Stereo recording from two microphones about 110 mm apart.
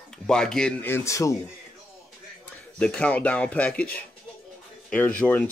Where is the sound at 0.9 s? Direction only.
25° left (ahead or behind).